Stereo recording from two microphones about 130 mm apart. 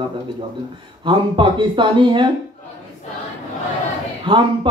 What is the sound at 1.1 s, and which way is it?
Speech, 40° right (ahead or behind).